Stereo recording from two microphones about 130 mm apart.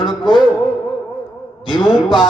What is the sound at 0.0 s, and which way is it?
Music, 35° right (ahead or behind).